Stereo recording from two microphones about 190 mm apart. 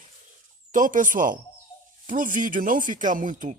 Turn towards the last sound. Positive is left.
turn(degrees=-45)  # may be behind; listen again after turning